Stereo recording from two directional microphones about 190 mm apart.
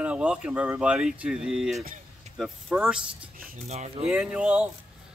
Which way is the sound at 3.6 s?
35° right (ahead or behind).